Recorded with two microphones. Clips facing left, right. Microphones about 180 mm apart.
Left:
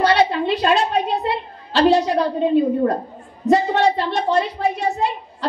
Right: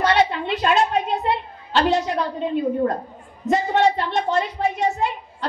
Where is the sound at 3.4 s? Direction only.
35° left (ahead or behind).